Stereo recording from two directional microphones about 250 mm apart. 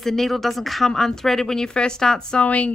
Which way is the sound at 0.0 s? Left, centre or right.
Centre.